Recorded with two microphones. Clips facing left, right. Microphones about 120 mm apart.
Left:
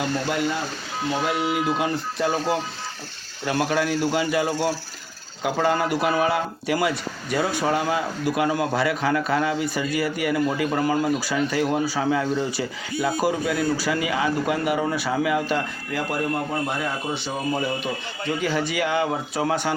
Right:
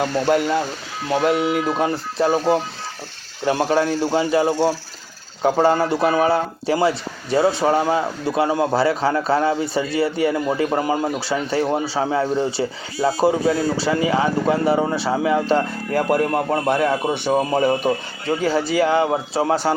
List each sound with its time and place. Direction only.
0.0 s a man's voice: 50° right (ahead or behind)
1.6 s speech: 35° right (ahead or behind)
15.9 s a man's voice: 50° right (ahead or behind); by 19.7 s 35° right (ahead or behind)